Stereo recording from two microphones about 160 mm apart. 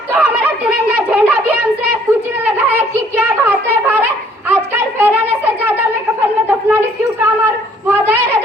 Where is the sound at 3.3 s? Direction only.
10° right (ahead or behind).